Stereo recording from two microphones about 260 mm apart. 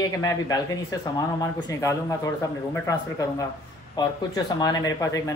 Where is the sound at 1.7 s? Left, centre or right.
Centre.